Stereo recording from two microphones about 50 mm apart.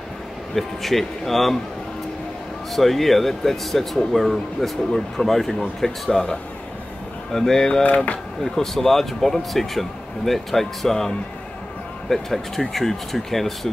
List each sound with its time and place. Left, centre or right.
0.6 s speech: centre
2.7 s speech: centre
7.3 s speech: centre
7.8 s speech: left
8.5 s speech: centre